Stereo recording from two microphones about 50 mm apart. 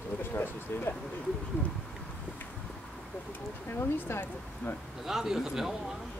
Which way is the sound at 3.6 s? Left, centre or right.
Left.